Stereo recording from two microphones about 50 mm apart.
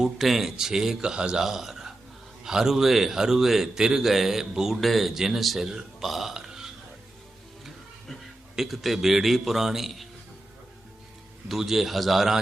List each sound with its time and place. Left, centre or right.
0.0 s a man's voice: centre
1.5 s a man's voice: centre
11.4 s a man's voice: centre